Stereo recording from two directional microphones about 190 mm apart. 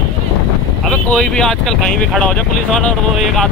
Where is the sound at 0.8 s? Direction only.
5° left (ahead or behind).